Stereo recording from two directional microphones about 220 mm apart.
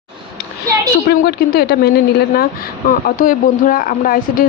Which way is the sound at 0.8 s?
45° left (ahead or behind).